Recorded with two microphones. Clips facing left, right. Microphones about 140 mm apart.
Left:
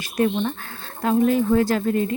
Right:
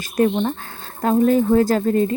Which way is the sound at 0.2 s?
40° right (ahead or behind).